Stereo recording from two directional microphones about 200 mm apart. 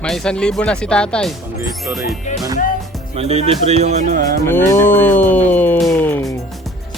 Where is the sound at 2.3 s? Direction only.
35° left (ahead or behind).